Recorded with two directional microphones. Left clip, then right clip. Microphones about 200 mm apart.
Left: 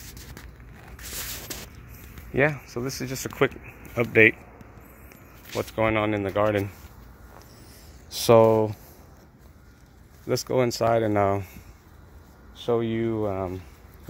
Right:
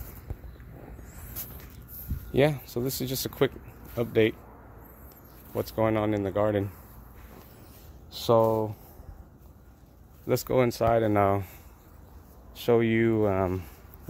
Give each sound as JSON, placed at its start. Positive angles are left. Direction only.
{"t": 2.3, "sound": "speech", "side_deg": -25}
{"t": 2.7, "sound": "speech", "side_deg": -40}
{"t": 3.2, "sound": "speech", "side_deg": -10}
{"t": 3.9, "sound": "speech", "side_deg": 5}
{"t": 5.5, "sound": "speech", "side_deg": -10}
{"t": 8.1, "sound": "speech", "side_deg": 20}
{"t": 10.2, "sound": "speech", "side_deg": -5}
{"t": 12.5, "sound": "speech", "side_deg": -25}